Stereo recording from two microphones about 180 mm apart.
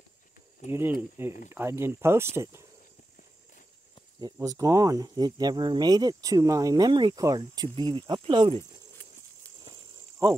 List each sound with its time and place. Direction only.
0.7 s speech: 15° right (ahead or behind)
4.2 s speech: 20° right (ahead or behind)